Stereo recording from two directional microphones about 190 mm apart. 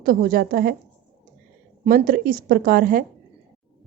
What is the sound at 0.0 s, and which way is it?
Speech, 50° right (ahead or behind).